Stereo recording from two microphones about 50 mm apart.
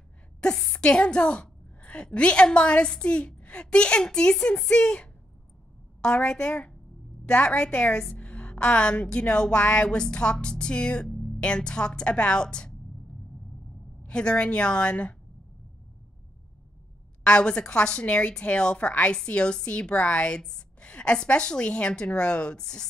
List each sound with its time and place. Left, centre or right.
0.4 s a sound: centre
2.0 s a woman's voice: left
14.0 s a woman's voice: centre
17.2 s a woman's voice: left